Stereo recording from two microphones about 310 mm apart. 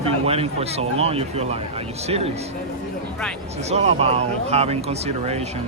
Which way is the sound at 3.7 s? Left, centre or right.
Centre.